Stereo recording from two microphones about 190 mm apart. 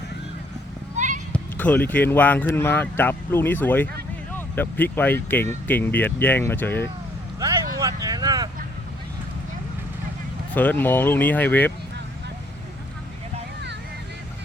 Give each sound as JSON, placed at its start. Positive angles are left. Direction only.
{"t": 0.9, "sound": "horse", "side_deg": -40}
{"t": 1.3, "sound": "speech", "side_deg": 10}
{"t": 7.3, "sound": "a sound", "side_deg": -20}
{"t": 10.5, "sound": "speech", "side_deg": 10}